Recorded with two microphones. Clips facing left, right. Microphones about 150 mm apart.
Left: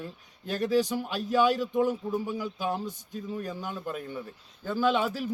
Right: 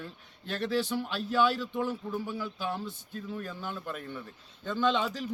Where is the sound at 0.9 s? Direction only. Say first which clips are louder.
Left 1 dB; 10° left (ahead or behind).